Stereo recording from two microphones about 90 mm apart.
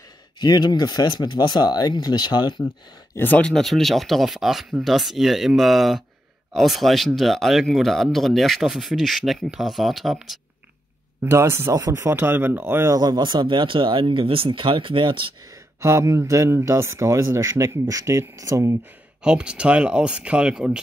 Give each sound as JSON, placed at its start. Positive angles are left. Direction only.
{"t": 0.4, "sound": "speech", "side_deg": 50}
{"t": 3.2, "sound": "speech", "side_deg": 20}
{"t": 3.4, "sound": "speech", "side_deg": 5}
{"t": 11.2, "sound": "speech", "side_deg": -30}
{"t": 12.9, "sound": "speech", "side_deg": -50}
{"t": 15.8, "sound": "speech", "side_deg": -35}
{"t": 19.2, "sound": "speech", "side_deg": -10}